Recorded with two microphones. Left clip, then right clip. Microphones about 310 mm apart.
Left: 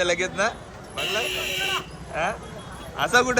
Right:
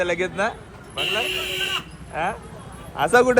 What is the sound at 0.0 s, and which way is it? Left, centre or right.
Speech, centre.